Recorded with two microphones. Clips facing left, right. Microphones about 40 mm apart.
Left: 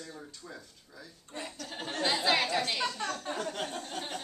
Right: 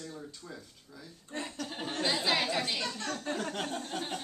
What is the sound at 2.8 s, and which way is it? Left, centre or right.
Speech, left.